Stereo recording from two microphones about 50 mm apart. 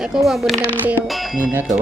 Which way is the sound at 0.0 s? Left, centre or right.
Centre.